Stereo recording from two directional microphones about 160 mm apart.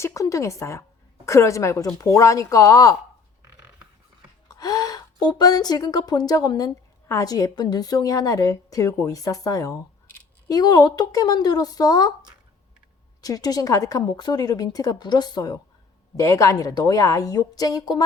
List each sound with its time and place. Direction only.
0.0 s a woman's voice: 20° left (ahead or behind)
4.4 s a woman's voice: 25° left (ahead or behind)
13.2 s a woman's voice: 25° left (ahead or behind)